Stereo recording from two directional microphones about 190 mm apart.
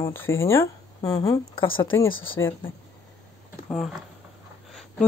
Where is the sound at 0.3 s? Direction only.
15° left (ahead or behind).